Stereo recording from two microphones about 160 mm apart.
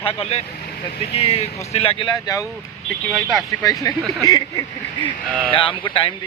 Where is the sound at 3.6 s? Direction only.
20° left (ahead or behind).